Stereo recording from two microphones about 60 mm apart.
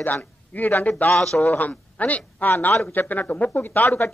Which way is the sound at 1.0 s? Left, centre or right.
Centre.